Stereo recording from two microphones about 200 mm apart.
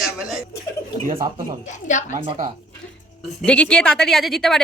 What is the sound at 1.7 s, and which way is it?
Speech, 40° left (ahead or behind).